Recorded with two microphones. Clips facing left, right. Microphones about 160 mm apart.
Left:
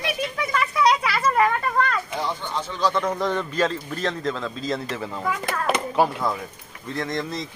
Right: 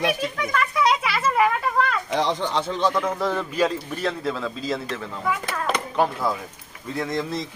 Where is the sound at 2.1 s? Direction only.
90° right.